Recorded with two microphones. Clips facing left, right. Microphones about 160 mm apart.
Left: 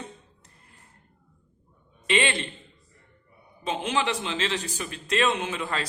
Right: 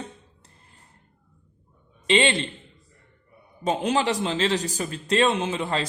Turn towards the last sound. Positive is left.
turn(degrees=-25)  # may be behind; listen again after turning